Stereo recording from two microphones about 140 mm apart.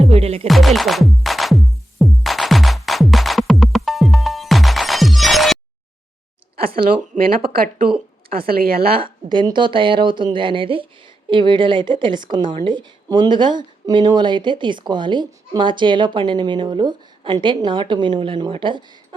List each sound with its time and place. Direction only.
0.0 s music: 45° right (ahead or behind)
0.4 s music: centre (ahead or behind)
7.2 s speech: 90° right
9.0 s speech: 35° right (ahead or behind)